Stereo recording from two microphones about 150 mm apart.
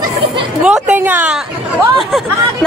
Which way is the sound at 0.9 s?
15° right (ahead or behind).